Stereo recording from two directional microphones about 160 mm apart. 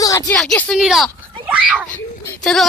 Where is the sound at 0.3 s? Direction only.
5° left (ahead or behind).